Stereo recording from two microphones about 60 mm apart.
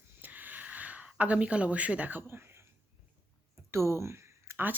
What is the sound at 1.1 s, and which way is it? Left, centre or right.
Speech, right.